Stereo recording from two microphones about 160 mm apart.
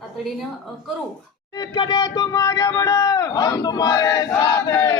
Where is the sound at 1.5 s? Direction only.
25° left (ahead or behind).